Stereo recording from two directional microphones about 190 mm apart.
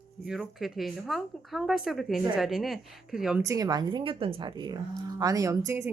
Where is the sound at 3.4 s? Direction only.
20° right (ahead or behind).